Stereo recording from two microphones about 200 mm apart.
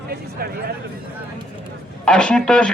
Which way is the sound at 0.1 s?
50° right (ahead or behind).